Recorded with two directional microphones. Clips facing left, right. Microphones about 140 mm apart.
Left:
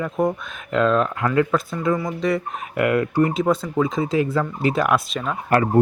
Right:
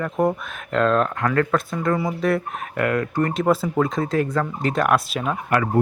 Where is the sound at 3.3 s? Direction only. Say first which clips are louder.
Right 1 dB; centre (ahead or behind).